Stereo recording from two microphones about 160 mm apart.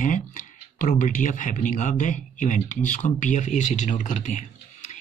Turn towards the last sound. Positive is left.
turn(degrees=50)  # may be behind; listen again after turning